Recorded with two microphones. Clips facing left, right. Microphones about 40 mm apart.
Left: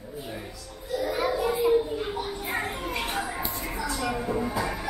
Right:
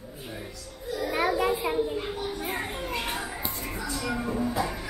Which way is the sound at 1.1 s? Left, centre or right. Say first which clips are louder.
Right 3 dB; right.